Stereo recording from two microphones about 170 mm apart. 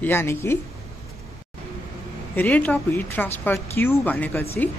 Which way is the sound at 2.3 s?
10° left (ahead or behind).